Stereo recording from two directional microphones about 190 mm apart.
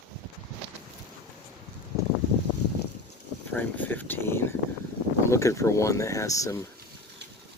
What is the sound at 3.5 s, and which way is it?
Speech, 10° left (ahead or behind).